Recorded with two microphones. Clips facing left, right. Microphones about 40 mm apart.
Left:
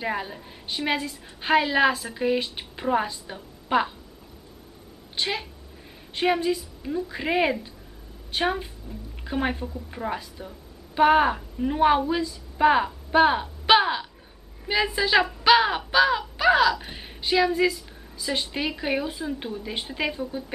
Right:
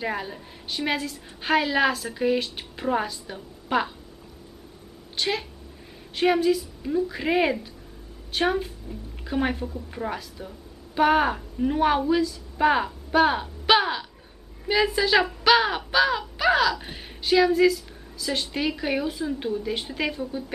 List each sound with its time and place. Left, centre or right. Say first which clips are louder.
0.0 s speech: even; centre
5.1 s a woman's voice: right 1 dB; centre